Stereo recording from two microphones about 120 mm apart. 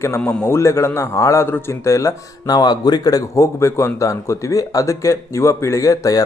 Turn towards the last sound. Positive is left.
turn(degrees=25)  # may be behind; listen again after turning